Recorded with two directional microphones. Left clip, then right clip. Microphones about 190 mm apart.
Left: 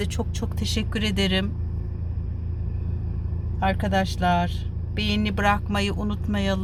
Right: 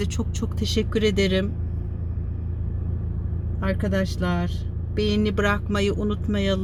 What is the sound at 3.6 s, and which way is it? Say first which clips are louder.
Speech: left 3 dB; 15° left (ahead or behind).